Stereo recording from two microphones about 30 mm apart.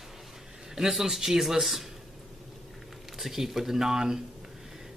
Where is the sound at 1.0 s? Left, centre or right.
Centre.